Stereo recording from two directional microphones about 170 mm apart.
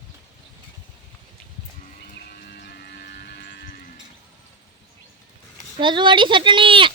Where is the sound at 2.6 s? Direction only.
70° left (ahead or behind).